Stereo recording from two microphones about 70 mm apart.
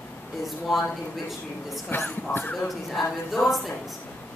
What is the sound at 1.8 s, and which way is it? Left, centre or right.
Speech, left.